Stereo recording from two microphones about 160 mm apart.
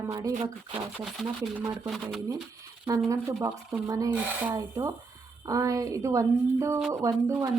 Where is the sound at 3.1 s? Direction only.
20° right (ahead or behind).